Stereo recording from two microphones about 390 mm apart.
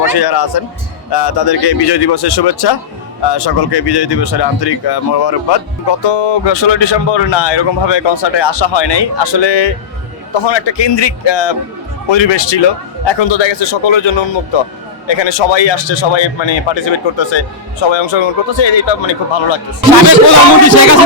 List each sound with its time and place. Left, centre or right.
0.0 s a man's voice: left